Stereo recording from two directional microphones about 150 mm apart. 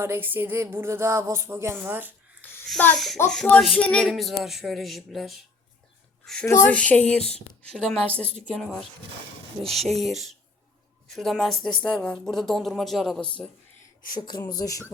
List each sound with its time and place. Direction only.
0.0 s music: 15° right (ahead or behind)
2.6 s a woman's voice: 5° left (ahead or behind)
14.2 s speech: 30° left (ahead or behind)